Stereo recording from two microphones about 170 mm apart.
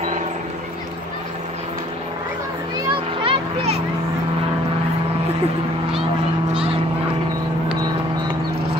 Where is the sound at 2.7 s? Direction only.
30° right (ahead or behind).